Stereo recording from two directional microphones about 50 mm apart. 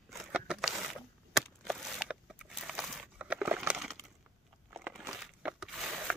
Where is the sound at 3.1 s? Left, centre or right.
Right.